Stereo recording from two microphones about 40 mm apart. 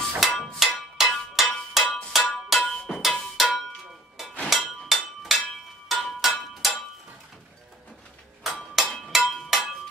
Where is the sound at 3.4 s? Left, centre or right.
Centre.